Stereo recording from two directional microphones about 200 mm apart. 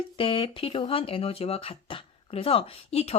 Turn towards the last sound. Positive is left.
turn(degrees=30)  # may be behind; listen again after turning